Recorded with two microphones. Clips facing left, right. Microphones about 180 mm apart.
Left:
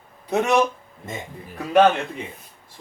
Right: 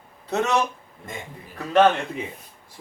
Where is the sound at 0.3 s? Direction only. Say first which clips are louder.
Left 3 dB; 15° left (ahead or behind).